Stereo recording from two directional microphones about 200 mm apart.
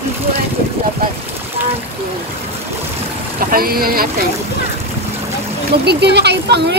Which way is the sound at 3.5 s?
50° right (ahead or behind).